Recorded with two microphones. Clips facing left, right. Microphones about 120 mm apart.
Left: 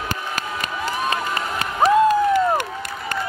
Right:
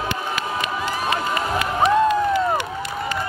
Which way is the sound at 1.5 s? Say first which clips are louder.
Left 2 dB; 40° left (ahead or behind).